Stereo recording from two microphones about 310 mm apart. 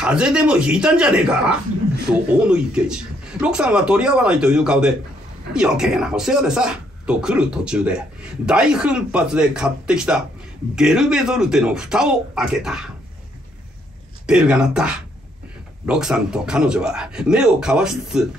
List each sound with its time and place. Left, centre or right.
0.0 s speech: centre
14.2 s speech: centre